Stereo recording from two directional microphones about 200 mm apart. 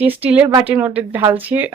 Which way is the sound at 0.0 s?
5° right (ahead or behind).